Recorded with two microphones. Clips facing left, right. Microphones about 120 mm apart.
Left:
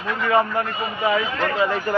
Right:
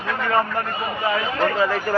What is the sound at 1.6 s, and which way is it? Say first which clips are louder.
Speech: even; 20° left (ahead or behind).